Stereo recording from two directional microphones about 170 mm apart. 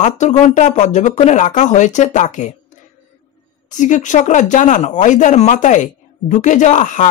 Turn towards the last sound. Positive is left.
turn(degrees=45)  # may be behind; listen again after turning